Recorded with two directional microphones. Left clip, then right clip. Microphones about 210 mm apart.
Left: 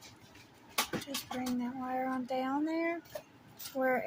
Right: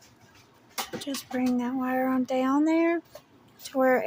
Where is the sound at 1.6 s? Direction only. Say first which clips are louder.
Right 8 dB; 45° right (ahead or behind).